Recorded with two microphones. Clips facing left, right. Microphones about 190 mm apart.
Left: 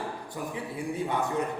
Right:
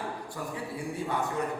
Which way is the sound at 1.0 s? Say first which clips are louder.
Left 2 dB; 20° left (ahead or behind).